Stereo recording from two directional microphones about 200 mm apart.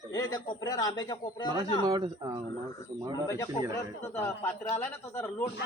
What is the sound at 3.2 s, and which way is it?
Speech, 15° left (ahead or behind).